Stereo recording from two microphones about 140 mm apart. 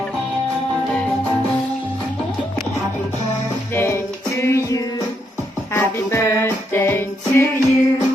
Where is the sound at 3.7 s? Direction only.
20° left (ahead or behind).